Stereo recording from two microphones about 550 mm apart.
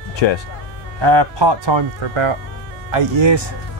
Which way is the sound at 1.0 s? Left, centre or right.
Right.